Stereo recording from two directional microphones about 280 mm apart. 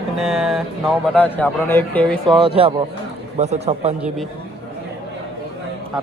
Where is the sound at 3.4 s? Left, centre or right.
Right.